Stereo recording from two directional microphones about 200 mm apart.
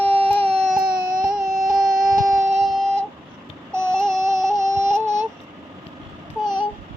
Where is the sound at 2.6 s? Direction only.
Centre (ahead or behind).